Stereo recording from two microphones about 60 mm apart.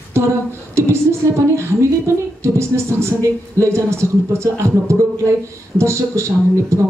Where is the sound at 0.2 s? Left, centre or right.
Right.